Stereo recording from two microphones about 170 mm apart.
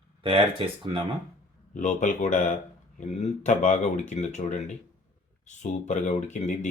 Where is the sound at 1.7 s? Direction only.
45° left (ahead or behind).